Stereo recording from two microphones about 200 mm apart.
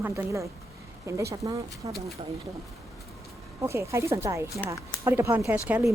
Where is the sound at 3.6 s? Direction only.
15° right (ahead or behind).